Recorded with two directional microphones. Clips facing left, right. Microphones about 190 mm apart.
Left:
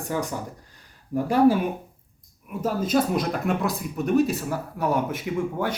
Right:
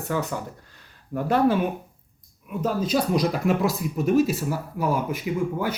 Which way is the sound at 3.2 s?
Centre (ahead or behind).